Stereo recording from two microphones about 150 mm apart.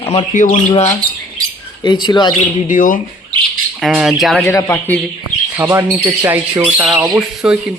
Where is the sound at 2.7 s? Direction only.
60° left (ahead or behind).